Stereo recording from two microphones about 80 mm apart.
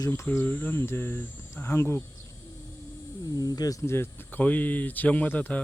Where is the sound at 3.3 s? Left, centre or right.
Left.